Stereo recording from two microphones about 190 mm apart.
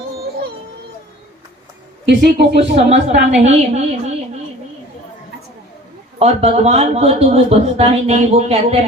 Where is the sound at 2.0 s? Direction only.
60° right (ahead or behind).